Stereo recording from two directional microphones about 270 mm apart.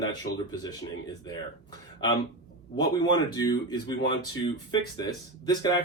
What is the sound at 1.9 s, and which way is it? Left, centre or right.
Speech, centre.